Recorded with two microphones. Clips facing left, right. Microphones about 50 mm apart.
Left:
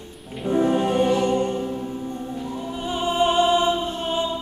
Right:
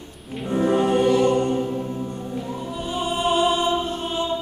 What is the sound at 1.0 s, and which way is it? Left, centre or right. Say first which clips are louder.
Music: right 2 dB; centre.